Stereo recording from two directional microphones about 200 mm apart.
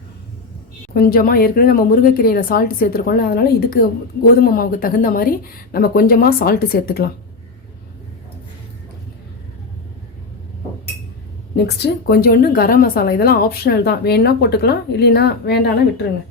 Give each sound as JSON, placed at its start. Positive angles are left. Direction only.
{"t": 0.9, "sound": "speech", "side_deg": 45}
{"t": 11.5, "sound": "speech", "side_deg": 55}